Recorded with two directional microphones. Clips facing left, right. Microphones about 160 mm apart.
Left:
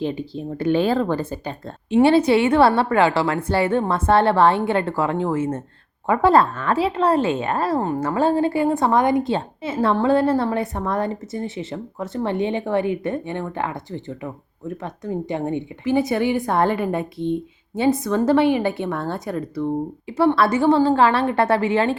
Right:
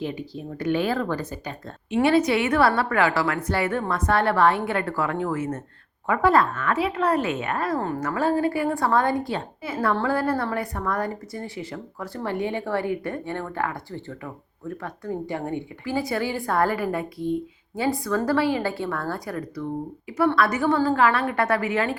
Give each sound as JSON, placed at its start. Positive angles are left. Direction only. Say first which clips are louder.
{"t": 0.0, "sound": "a woman's voice", "louder": "left 5 dB", "side_deg": 30}
{"t": 7.8, "sound": "a woman's voice", "louder": "left 5 dB", "side_deg": 20}